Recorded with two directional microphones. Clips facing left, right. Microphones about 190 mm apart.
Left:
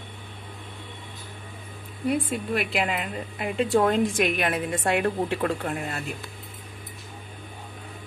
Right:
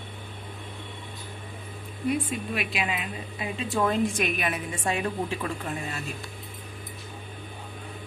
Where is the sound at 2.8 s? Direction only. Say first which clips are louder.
Left 3 dB; 65° left (ahead or behind).